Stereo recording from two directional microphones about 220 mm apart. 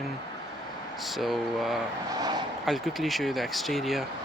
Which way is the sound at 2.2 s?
20° right (ahead or behind).